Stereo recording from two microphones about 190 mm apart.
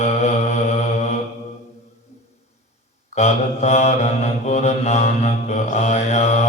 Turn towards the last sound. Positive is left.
turn(degrees=35)  # may be behind; listen again after turning